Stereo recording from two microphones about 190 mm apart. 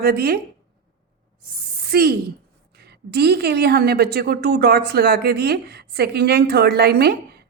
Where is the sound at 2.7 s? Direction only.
60° right (ahead or behind).